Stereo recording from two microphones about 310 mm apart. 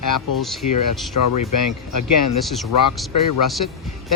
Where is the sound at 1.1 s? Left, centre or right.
Left.